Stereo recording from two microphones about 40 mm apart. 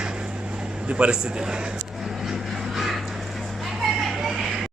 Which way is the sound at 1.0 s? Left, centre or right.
Right.